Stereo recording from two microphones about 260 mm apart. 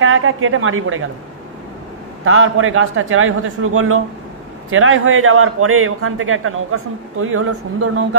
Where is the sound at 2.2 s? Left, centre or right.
Right.